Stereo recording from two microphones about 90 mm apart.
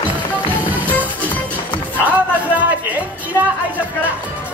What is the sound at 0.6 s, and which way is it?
Music, 20° right (ahead or behind).